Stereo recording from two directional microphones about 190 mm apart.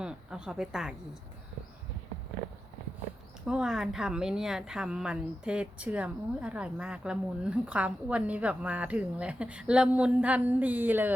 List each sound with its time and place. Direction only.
0.0 s a woman's voice: 5° right (ahead or behind)
3.4 s a woman's voice: 5° right (ahead or behind)